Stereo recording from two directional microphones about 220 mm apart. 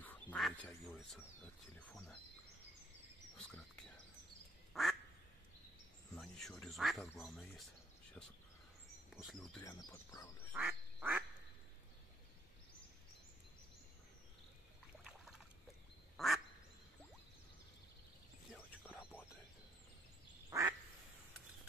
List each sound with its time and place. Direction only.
0.0 s duck: 5° left (ahead or behind)
1.0 s speech: centre (ahead or behind)
3.3 s a sound: 5° left (ahead or behind)
4.7 s quack: centre (ahead or behind)
6.1 s speech: centre (ahead or behind)
9.1 s speech: centre (ahead or behind)
9.6 s speech: 15° left (ahead or behind)
10.5 s duck: 5° right (ahead or behind)
15.0 s boat: 5° right (ahead or behind)
16.2 s quack: centre (ahead or behind)
18.5 s a sound: 5° right (ahead or behind)
20.4 s quack: 15° right (ahead or behind)